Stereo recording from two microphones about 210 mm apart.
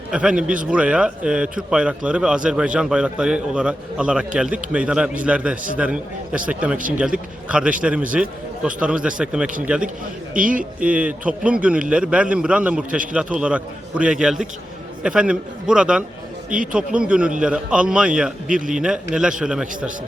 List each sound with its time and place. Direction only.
0.1 s a man's voice: 5° right (ahead or behind)
6.7 s a man's voice: 40° right (ahead or behind)
7.4 s a man's voice: 5° right (ahead or behind)
10.3 s a man's voice: 40° right (ahead or behind)
10.8 s a man's voice: 5° right (ahead or behind)